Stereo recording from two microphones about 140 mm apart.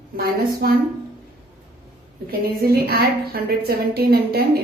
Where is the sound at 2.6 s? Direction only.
90° right.